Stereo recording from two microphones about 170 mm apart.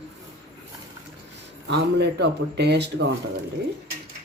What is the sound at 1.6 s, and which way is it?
Speech, 85° right.